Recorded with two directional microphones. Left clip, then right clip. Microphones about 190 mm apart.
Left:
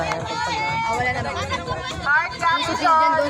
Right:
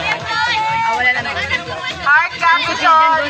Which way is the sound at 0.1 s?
60° left (ahead or behind).